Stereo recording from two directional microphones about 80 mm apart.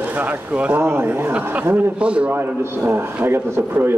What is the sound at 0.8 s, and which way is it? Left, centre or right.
A man's voice, right.